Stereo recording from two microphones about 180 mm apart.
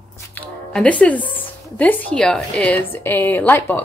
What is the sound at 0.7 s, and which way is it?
A woman's voice, 5° left (ahead or behind).